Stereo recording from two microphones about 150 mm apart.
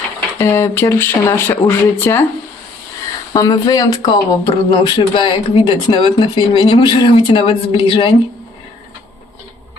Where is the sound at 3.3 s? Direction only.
25° left (ahead or behind).